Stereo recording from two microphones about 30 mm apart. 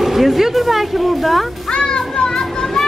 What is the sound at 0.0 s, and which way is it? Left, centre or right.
Speech, centre.